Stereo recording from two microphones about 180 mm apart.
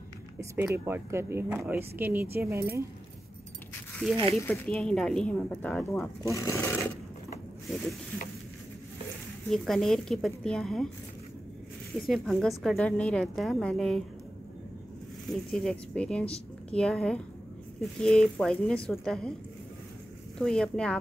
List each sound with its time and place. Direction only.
0.4 s speech: 10° right (ahead or behind)
4.4 s a woman's voice: 10° left (ahead or behind)
6.2 s speech: 15° left (ahead or behind)
9.5 s a woman's voice: centre (ahead or behind)
12.1 s a woman's voice: centre (ahead or behind)
15.5 s a woman's voice: 5° left (ahead or behind)
20.3 s a woman's voice: 5° left (ahead or behind)